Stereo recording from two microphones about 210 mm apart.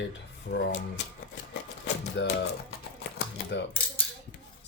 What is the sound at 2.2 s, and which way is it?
Speech, 60° left (ahead or behind).